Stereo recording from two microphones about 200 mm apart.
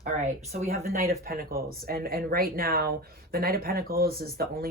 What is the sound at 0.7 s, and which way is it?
Speech, 45° right (ahead or behind).